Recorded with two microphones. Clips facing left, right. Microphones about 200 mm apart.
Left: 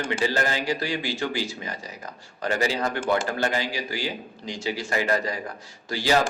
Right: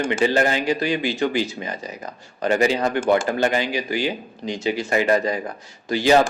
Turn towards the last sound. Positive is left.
turn(degrees=-20)  # may be behind; listen again after turning